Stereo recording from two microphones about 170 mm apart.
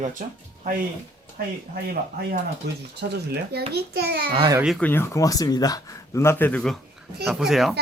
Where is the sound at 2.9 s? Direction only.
75° right (ahead or behind).